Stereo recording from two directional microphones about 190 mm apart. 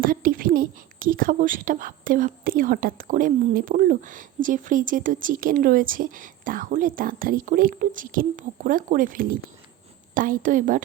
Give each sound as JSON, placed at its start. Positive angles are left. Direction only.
{"t": 0.0, "sound": "a woman's voice", "side_deg": -50}